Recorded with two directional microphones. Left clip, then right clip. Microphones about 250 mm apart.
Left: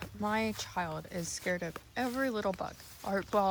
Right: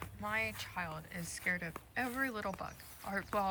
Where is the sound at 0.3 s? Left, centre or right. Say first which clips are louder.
Left 4 dB; centre.